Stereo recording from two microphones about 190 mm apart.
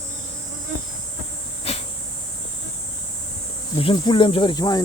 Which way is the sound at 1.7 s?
35° left (ahead or behind).